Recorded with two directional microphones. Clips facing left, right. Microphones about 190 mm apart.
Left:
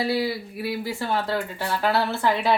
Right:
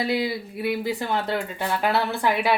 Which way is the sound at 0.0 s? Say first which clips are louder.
Even; 20° right (ahead or behind).